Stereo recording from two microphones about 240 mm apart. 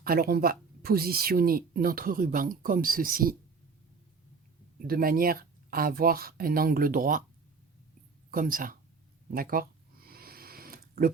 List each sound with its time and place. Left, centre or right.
0.0 s speech: right
4.8 s speech: right
8.3 s speech: right
9.3 s a sound: right